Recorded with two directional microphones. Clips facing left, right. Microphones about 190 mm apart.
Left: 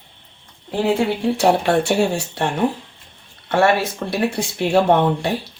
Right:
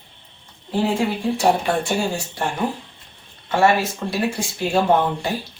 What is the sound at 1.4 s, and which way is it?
Speech, 70° left (ahead or behind).